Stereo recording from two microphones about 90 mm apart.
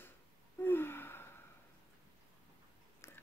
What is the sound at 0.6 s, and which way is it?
Gasp, 25° left (ahead or behind).